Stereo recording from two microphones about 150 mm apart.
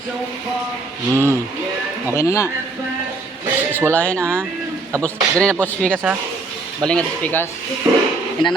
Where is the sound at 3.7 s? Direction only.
15° right (ahead or behind).